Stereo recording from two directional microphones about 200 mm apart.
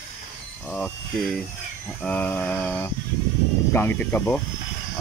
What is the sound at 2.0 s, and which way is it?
Mantra, 5° left (ahead or behind).